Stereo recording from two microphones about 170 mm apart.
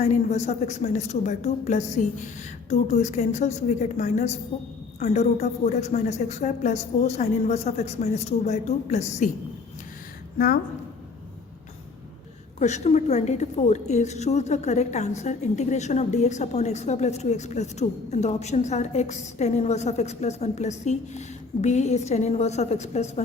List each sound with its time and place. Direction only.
0.0 s a woman's voice: 40° left (ahead or behind)
10.3 s a woman's voice: 65° left (ahead or behind)
12.5 s a woman's voice: 45° left (ahead or behind)